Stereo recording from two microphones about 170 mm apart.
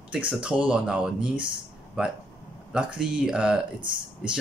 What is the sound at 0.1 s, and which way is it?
Speech, 5° right (ahead or behind).